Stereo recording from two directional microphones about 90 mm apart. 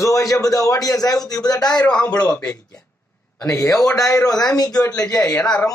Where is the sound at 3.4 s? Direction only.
35° left (ahead or behind).